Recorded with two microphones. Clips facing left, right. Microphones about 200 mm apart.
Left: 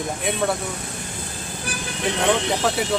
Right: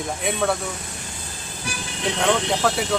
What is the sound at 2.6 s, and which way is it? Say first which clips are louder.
Speech: right 1 dB; centre (ahead or behind).